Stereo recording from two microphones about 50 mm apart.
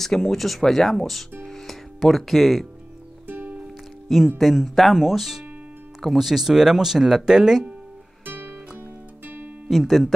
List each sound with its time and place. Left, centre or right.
0.0 s speech: centre
1.5 s music: centre
3.3 s music: right
4.4 s speech: centre
8.3 s music: right
9.7 s speech: centre